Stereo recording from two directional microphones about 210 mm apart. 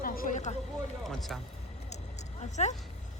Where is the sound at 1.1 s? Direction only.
Centre (ahead or behind).